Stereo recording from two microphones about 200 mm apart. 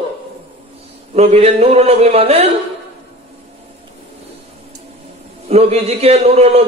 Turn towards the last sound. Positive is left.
turn(degrees=-30)  # may be behind; listen again after turning